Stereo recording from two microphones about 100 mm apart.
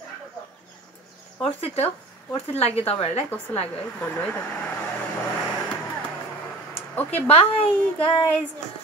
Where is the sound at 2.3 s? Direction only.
90° left.